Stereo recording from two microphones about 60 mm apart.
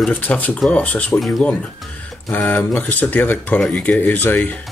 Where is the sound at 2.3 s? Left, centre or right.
Left.